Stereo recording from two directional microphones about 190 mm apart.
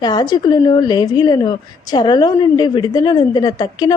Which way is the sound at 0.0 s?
20° left (ahead or behind).